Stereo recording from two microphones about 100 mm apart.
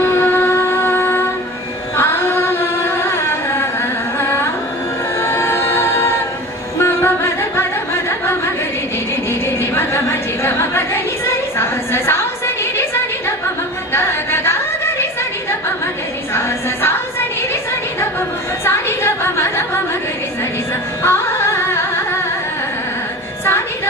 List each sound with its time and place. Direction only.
0.0 s music: 20° left (ahead or behind)
4.2 s carnatic music: 25° left (ahead or behind)
5.2 s choir: 25° left (ahead or behind)
6.8 s music: 25° left (ahead or behind)
9.6 s a sound: 25° left (ahead or behind)
16.3 s a sound: 25° left (ahead or behind)
18.6 s chatter: 25° left (ahead or behind)
21.0 s carnatic music: 25° left (ahead or behind)